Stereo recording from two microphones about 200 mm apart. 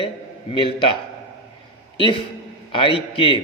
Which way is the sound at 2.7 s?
25° left (ahead or behind).